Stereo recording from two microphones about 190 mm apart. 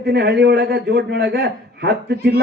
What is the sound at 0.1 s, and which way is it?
Speech, 60° right (ahead or behind).